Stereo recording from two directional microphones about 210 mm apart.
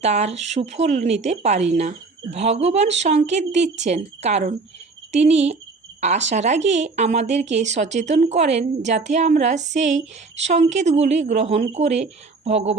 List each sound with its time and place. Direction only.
0.0 s speech: 30° right (ahead or behind)